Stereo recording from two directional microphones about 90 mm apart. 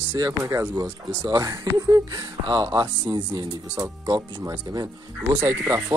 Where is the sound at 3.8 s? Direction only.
30° right (ahead or behind).